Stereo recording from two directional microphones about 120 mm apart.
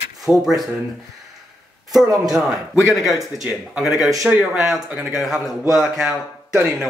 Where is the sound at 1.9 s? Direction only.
5° right (ahead or behind).